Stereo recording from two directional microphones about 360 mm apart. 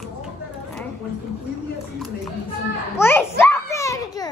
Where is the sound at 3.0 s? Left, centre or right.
Centre.